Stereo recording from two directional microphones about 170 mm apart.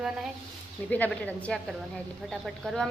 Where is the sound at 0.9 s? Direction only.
10° left (ahead or behind).